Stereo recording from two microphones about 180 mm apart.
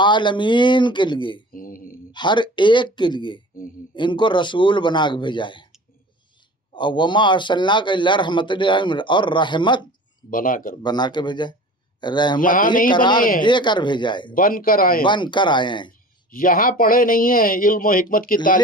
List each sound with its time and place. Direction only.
0.0 s a man's voice: 25° left (ahead or behind)
1.5 s mantra: 50° left (ahead or behind)
2.1 s a man's voice: 25° left (ahead or behind)
6.7 s a man's voice: 25° left (ahead or behind)
10.2 s speech: 50° left (ahead or behind)
10.8 s a man's voice: 25° left (ahead or behind)
12.4 s speech: 50° left (ahead or behind)
12.9 s a man's voice: 25° left (ahead or behind)
14.3 s speech: 50° left (ahead or behind)
15.0 s a man's voice: 25° left (ahead or behind)
16.3 s speech: 50° left (ahead or behind)